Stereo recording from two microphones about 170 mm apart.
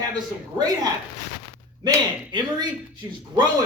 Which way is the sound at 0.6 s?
20° right (ahead or behind).